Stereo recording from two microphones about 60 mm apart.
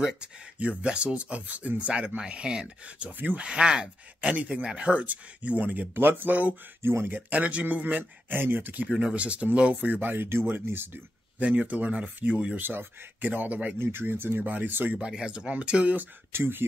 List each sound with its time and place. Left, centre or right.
0.6 s speech: right
3.2 s speech: right
3.4 s speech: centre; by 6.9 s right
6.9 s speech: right
7.2 s speech: right
9.0 s speech: right
11.3 s speech: right
12.5 s speech: right
13.7 s speech: right
15.0 s speech: centre
16.0 s speech: right